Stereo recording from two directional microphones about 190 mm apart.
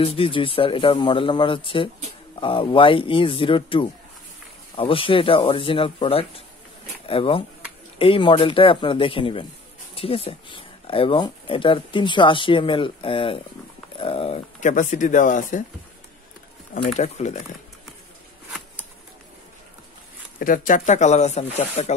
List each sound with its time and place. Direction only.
0.0 s speech: 30° left (ahead or behind)
16.8 s speech: 35° left (ahead or behind)
20.3 s speech: 45° left (ahead or behind)